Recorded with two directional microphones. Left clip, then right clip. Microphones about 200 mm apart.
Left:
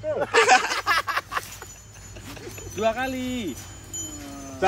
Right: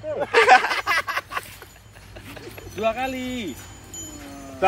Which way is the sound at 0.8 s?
15° right (ahead or behind).